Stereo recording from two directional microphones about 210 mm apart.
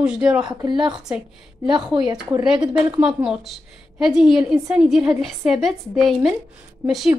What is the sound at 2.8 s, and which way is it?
A woman's voice, 5° right (ahead or behind).